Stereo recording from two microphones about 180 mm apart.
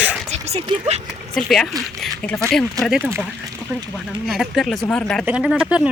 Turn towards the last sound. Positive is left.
turn(degrees=-5)  # may be behind; listen again after turning